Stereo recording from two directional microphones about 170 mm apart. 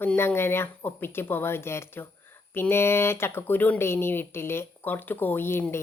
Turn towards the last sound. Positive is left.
turn(degrees=15)  # may be behind; listen again after turning